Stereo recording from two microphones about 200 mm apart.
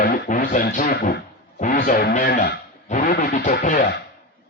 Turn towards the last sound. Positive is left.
turn(degrees=40)  # may be behind; listen again after turning